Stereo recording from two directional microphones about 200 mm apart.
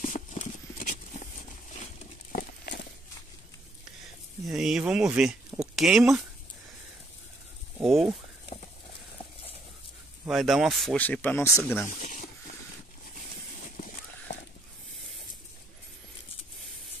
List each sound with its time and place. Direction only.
0.0 s horse: 40° left (ahead or behind)
2.3 s a sound: 55° left (ahead or behind)
4.5 s speech: 5° right (ahead or behind)
7.8 s speech: centre (ahead or behind)
10.2 s speech: centre (ahead or behind)
12.0 s snake: 40° left (ahead or behind)
14.3 s a sound: 60° left (ahead or behind)